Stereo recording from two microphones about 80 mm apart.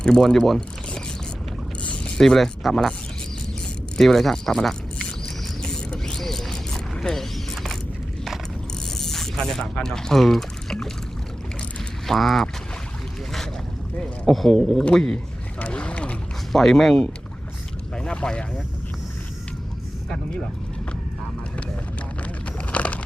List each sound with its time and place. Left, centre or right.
0.0 s speech: centre
1.8 s boat: centre
2.2 s speech: centre
3.9 s speech: centre
5.6 s mechanisms: centre
9.0 s speech: centre
12.0 s speech: centre
14.0 s speech: centre
15.5 s boat: centre
16.5 s speech: centre
22.2 s a sound: centre